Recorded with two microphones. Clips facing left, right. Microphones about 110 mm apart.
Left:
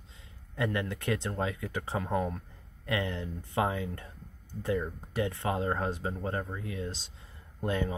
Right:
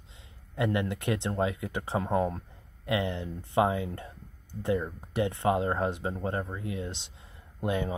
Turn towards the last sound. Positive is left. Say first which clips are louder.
# right 1 dB
turn(degrees=-15)  # may be behind; listen again after turning